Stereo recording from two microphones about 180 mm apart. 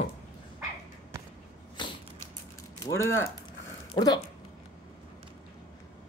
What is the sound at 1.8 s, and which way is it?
Mechanisms, 25° left (ahead or behind).